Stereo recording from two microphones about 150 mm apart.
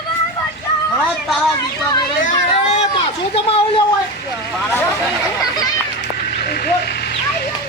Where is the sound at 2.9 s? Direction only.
40° left (ahead or behind).